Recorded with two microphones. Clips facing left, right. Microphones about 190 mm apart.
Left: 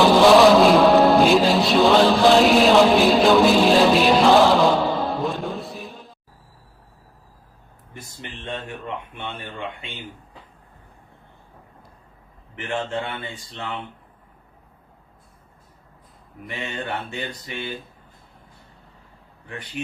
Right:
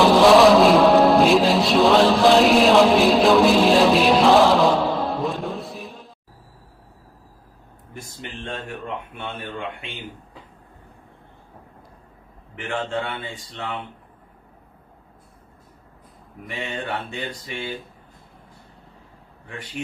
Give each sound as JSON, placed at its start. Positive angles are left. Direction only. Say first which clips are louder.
{"t": 0.0, "sound": "music", "louder": "even", "side_deg": 0}
{"t": 12.9, "sound": "speech", "louder": "right 1 dB", "side_deg": 10}